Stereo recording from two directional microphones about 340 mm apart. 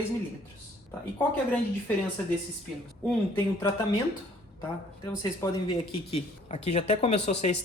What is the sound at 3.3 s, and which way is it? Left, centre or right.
Speech, centre.